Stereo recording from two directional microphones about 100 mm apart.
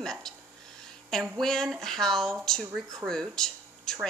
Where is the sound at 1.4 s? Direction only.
5° left (ahead or behind).